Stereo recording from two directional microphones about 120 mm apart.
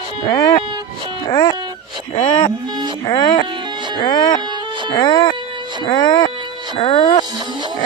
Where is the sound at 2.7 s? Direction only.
40° right (ahead or behind).